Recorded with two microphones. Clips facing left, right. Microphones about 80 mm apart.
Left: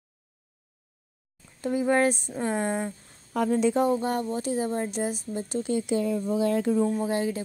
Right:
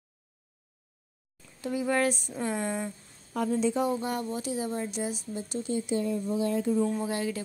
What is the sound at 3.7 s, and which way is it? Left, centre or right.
A woman's voice, left.